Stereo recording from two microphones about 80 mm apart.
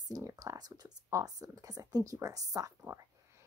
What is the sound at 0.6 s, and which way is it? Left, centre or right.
A woman's voice, right.